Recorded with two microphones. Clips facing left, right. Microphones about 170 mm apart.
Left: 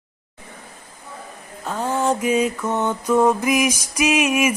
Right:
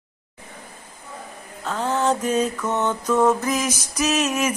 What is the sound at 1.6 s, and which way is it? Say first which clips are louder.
Mantra: even; 10° left (ahead or behind).